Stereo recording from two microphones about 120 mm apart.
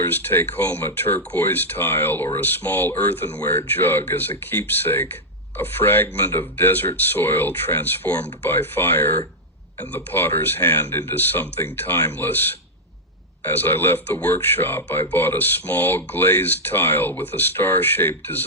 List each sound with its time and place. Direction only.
0.0 s speech: 15° left (ahead or behind)
13.4 s speech: 15° left (ahead or behind)